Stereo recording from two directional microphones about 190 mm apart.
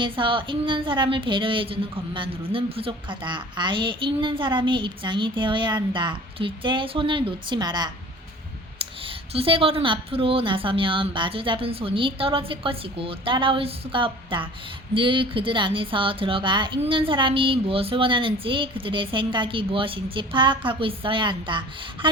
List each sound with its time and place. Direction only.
0.0 s a woman's voice: 25° right (ahead or behind)